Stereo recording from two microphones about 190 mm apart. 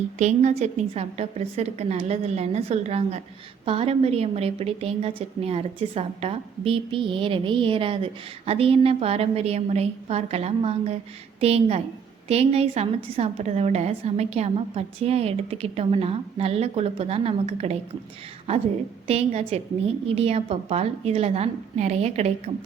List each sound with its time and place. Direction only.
0.2 s a woman's voice: 35° right (ahead or behind)
19.0 s a woman's voice: 35° right (ahead or behind)